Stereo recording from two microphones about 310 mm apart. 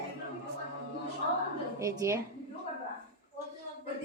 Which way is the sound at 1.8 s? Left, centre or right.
Centre.